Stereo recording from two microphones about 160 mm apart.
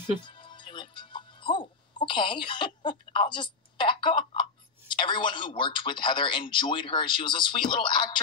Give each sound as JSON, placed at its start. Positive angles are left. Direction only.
{"t": 0.2, "sound": "speech", "side_deg": 30}